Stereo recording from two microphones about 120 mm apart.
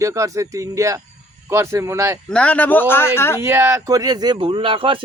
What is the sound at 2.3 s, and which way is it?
Speech, 10° left (ahead or behind).